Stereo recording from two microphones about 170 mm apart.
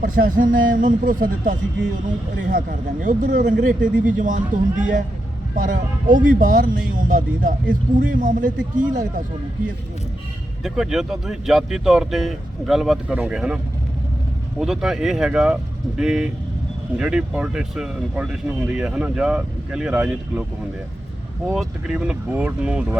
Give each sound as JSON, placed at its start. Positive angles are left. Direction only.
{"t": 0.0, "sound": "speech", "side_deg": -55}
{"t": 10.6, "sound": "speech", "side_deg": -5}
{"t": 14.6, "sound": "speech", "side_deg": -5}
{"t": 21.4, "sound": "speech", "side_deg": -5}